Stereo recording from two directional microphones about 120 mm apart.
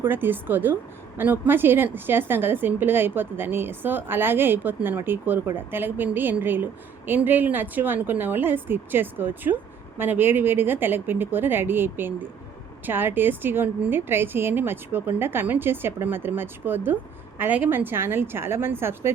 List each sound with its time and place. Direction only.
0.0 s a woman's voice: 15° right (ahead or behind)